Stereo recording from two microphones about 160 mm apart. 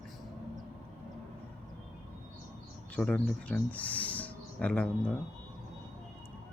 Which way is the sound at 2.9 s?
5° left (ahead or behind).